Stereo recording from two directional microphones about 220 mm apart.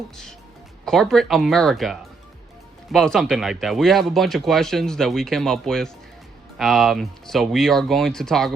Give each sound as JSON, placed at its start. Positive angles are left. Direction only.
{"t": 0.9, "sound": "speech", "side_deg": 0}